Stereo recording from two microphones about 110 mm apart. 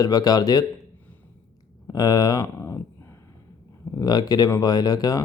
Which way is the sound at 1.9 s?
35° left (ahead or behind).